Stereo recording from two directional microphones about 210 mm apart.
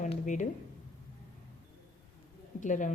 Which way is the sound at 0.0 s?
35° left (ahead or behind).